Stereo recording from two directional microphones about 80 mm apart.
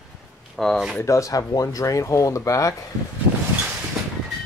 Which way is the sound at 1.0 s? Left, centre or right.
Left.